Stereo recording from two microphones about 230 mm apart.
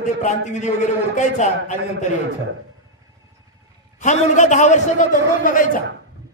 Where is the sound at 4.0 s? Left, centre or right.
Left.